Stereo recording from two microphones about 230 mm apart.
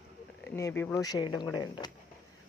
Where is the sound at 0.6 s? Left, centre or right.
Centre.